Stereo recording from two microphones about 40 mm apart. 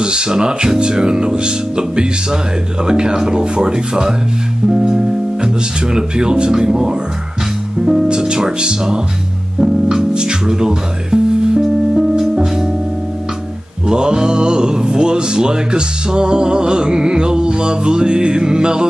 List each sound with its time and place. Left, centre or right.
0.0 s speech: right
9.6 s music: centre
13.8 s speech: centre